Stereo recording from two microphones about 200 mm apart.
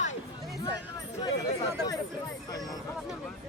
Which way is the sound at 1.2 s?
20° left (ahead or behind).